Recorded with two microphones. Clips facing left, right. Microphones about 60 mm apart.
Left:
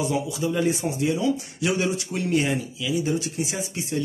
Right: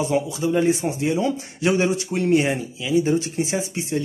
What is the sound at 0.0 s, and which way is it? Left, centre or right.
Speech, right.